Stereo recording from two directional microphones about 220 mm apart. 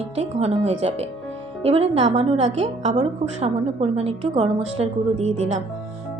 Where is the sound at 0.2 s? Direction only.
30° right (ahead or behind).